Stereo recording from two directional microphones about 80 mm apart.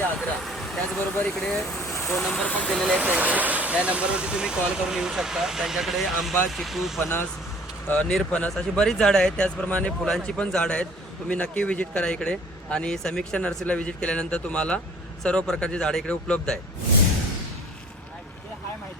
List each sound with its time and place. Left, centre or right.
0.2 s speech: centre
1.7 s vehicle: left
2.4 s speech: centre
2.6 s speech: centre
3.0 s speech: centre
7.9 s speech: centre
10.0 s speech: centre